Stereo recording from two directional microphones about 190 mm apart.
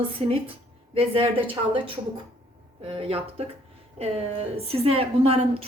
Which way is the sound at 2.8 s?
30° right (ahead or behind).